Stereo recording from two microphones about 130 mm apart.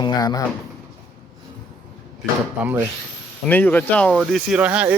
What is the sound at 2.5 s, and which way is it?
Speech, 15° right (ahead or behind).